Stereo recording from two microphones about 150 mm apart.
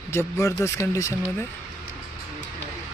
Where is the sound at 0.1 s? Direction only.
20° left (ahead or behind).